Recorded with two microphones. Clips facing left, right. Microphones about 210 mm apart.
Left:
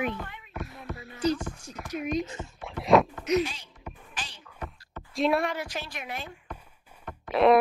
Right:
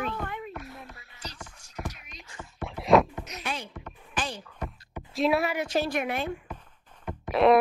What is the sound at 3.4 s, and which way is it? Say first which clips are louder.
Speech: even; 60° right (ahead or behind).